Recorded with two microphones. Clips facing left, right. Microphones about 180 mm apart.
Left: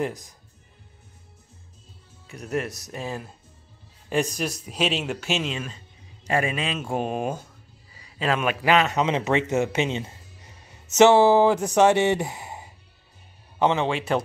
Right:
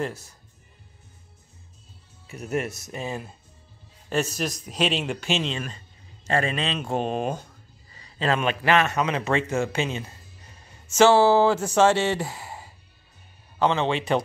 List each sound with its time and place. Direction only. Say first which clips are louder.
0.0 s speech: left 2 dB; 15° left (ahead or behind)
2.2 s speech: even; 5° right (ahead or behind)
4.1 s speech: left 1 dB; 15° left (ahead or behind)
7.9 s a sound: even; 5° left (ahead or behind)
8.6 s a man's voice: left 2 dB; 15° left (ahead or behind)
13.8 s speech: right 1 dB; 5° left (ahead or behind)